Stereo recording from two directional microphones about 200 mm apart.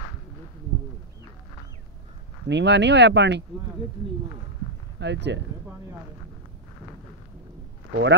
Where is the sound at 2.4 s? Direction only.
60° right (ahead or behind).